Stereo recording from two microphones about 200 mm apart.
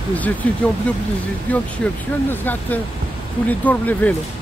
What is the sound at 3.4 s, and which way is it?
Speech, 10° left (ahead or behind).